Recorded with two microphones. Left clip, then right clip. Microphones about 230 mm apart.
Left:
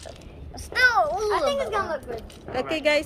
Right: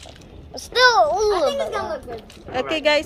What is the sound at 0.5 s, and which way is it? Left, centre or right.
Speech, right.